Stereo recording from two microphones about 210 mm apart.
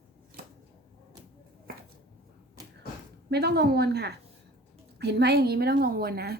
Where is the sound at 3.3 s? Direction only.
50° right (ahead or behind).